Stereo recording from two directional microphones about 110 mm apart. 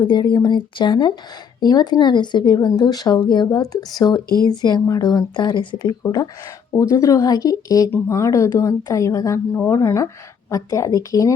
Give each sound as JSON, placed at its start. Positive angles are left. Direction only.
{"t": 0.0, "sound": "speech", "side_deg": 45}
{"t": 7.9, "sound": "speech", "side_deg": 15}
{"t": 8.1, "sound": "speech", "side_deg": 30}